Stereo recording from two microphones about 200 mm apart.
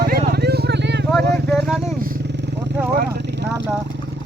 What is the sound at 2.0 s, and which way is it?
Vehicle, 50° right (ahead or behind).